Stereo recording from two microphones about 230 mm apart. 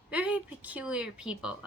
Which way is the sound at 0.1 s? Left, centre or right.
Centre.